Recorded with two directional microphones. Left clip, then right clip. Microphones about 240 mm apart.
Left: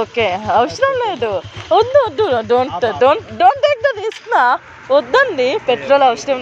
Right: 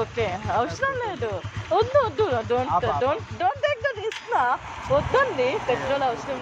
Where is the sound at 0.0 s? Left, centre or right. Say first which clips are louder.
Left 10 dB; left.